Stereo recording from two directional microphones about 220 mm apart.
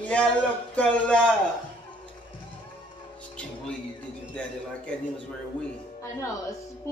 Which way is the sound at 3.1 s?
5° left (ahead or behind).